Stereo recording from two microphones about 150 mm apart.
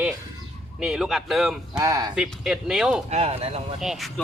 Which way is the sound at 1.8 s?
25° right (ahead or behind).